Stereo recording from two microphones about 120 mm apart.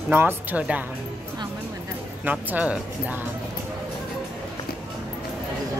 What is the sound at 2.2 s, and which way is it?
Speech, 15° right (ahead or behind).